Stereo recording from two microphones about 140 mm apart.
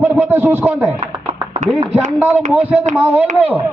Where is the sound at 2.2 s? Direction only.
10° right (ahead or behind).